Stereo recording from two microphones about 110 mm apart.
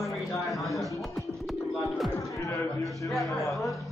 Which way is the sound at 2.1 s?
30° left (ahead or behind).